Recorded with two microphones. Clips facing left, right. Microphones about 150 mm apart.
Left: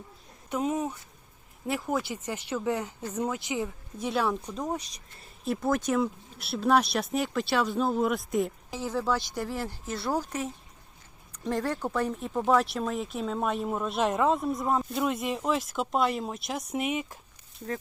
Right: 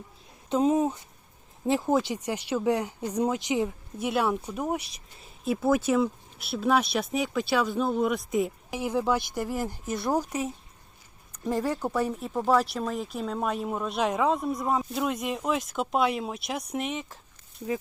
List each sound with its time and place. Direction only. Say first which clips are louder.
0.5 s a woman's voice: right 6 dB; 25° right (ahead or behind); by 8.5 s centre (ahead or behind)
8.7 s speech: right 3 dB; 15° right (ahead or behind); by 17.2 s 10° left (ahead or behind)